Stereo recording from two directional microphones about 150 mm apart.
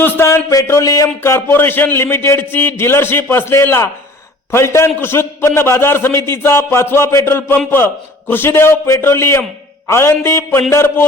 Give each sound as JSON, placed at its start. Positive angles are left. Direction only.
{"t": 0.0, "sound": "a man's voice", "side_deg": 15}